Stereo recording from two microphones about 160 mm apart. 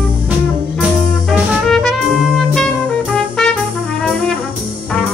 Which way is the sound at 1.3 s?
Centre (ahead or behind).